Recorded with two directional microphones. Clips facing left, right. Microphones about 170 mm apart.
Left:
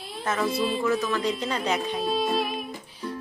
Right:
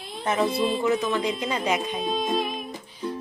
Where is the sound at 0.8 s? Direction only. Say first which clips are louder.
Right 1 dB; 20° right (ahead or behind).